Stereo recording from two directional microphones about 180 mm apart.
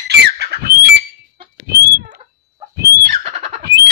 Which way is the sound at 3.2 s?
35° right (ahead or behind).